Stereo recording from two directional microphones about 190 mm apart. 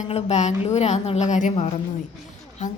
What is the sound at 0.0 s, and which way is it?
A woman's voice, 35° left (ahead or behind).